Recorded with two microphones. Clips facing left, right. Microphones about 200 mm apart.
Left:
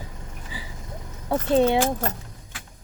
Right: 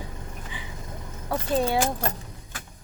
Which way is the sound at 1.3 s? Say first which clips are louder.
Left 5 dB; 25° left (ahead or behind).